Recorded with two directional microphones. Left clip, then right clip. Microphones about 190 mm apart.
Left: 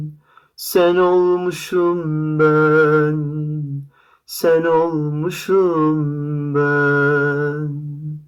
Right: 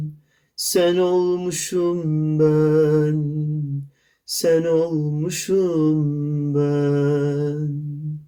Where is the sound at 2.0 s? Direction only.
10° right (ahead or behind).